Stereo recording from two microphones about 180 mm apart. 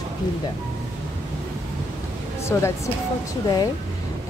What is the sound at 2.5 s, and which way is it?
Speech, 15° left (ahead or behind).